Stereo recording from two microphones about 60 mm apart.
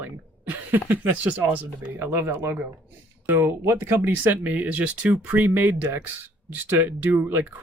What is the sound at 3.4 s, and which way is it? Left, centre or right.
Speech, right.